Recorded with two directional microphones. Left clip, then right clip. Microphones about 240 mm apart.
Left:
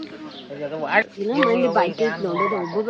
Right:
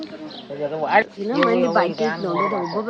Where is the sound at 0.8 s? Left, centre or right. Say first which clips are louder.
Right 2 dB; right.